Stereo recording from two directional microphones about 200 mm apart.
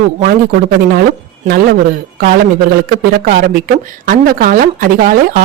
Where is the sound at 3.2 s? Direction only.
45° right (ahead or behind).